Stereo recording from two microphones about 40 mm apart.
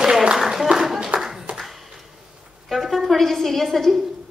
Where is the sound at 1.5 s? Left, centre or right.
Right.